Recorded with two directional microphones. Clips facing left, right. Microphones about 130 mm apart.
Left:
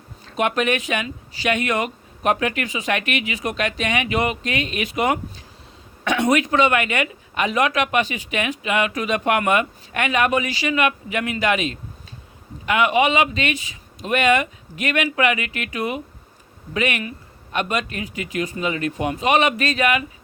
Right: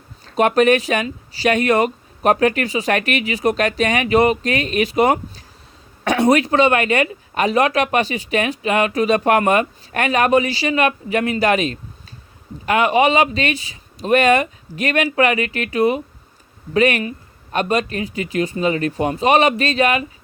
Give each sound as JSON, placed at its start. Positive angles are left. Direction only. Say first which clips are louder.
{"t": 0.3, "sound": "speech", "louder": "right 7 dB", "side_deg": -40}